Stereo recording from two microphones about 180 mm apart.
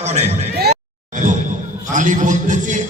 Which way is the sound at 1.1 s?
45° right (ahead or behind).